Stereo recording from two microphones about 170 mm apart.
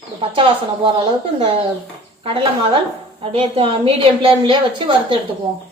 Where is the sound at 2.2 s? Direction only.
30° right (ahead or behind).